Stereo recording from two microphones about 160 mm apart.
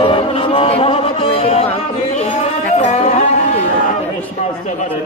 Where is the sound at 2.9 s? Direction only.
50° left (ahead or behind).